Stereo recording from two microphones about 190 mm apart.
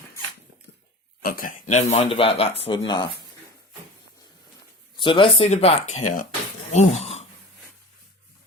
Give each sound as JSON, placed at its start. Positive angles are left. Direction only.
{"t": 1.2, "sound": "speech", "side_deg": 50}
{"t": 4.9, "sound": "speech", "side_deg": 25}